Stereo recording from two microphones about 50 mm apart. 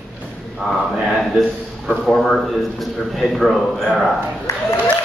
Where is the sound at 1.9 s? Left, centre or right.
Centre.